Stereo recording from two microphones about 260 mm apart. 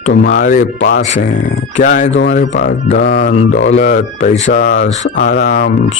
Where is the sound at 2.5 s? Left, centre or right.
Left.